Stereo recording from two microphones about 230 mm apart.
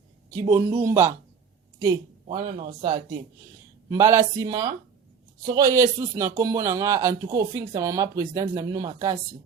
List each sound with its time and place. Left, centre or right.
0.3 s speech: centre
2.2 s speech: right
3.8 s speech: centre